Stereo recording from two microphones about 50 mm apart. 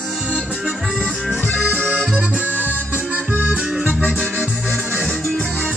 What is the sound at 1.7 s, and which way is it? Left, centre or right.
Accordion, right.